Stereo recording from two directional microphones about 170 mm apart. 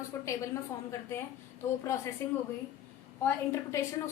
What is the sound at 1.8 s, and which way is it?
Speech, 15° left (ahead or behind).